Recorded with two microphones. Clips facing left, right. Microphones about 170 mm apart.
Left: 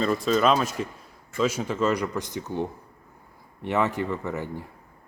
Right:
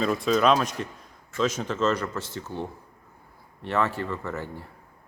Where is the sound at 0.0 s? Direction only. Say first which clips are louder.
Even; centre (ahead or behind).